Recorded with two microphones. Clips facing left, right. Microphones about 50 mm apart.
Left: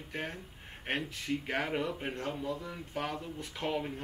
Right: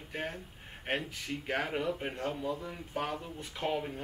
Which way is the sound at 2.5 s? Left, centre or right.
Centre.